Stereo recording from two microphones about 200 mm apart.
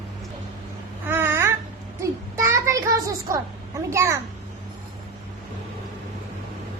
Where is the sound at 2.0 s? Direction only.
15° right (ahead or behind).